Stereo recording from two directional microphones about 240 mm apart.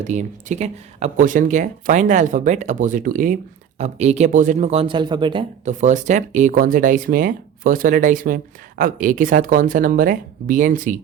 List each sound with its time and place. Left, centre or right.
0.1 s speech: right